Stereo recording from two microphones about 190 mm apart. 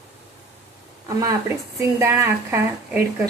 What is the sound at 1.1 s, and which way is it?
Speech, 20° right (ahead or behind).